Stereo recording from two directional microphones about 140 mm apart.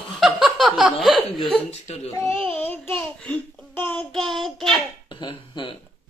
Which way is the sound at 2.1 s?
20° left (ahead or behind).